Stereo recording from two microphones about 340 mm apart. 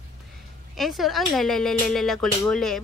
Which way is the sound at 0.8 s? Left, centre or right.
Centre.